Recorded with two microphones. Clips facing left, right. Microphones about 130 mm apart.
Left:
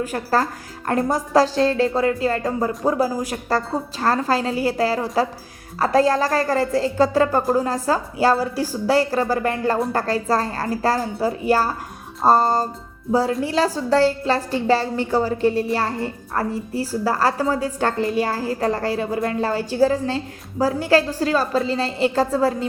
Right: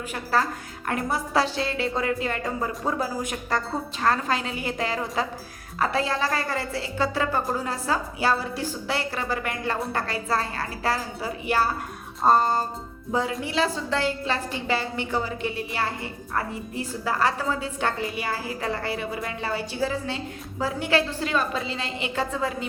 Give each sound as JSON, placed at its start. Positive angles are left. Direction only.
{"t": 0.1, "sound": "a woman's voice", "side_deg": 40}